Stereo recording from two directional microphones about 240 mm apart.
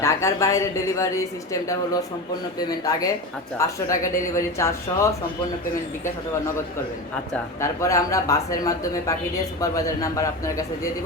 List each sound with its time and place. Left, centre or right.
0.0 s a woman's voice: centre
7.6 s a woman's voice: centre